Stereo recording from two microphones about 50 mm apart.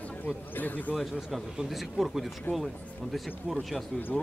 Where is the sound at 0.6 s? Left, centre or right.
Left.